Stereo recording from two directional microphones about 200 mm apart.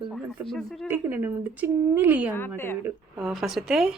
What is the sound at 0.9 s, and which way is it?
Speech, 10° right (ahead or behind).